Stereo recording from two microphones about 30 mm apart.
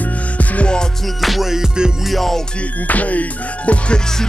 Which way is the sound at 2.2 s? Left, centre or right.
Centre.